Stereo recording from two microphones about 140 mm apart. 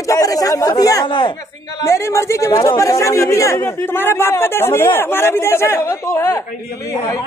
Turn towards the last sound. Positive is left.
turn(degrees=20)  # may be behind; listen again after turning